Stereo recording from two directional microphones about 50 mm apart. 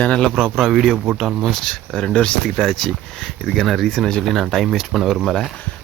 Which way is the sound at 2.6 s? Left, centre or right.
Centre.